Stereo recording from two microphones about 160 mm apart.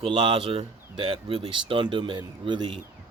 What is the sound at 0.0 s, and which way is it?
Speech, 35° right (ahead or behind).